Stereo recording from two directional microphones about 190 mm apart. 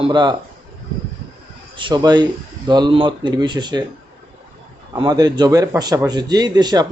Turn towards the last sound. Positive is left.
turn(degrees=-20)  # may be behind; listen again after turning